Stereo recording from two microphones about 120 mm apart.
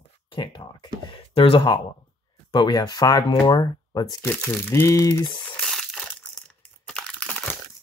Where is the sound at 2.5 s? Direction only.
35° left (ahead or behind).